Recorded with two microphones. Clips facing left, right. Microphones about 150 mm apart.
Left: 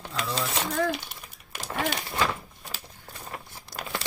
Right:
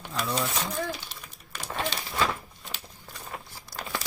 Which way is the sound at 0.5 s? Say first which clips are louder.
Left 4 dB; 75° left (ahead or behind).